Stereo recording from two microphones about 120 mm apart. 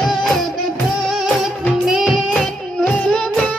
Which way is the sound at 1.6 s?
Centre (ahead or behind).